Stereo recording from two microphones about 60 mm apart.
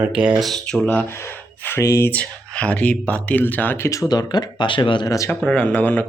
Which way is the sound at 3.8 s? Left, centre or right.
Left.